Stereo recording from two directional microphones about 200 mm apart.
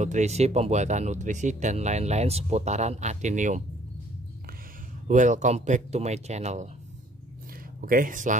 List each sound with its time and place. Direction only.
0.0 s speech: 35° right (ahead or behind)
5.0 s speech: 40° right (ahead or behind)
7.8 s speech: 45° right (ahead or behind)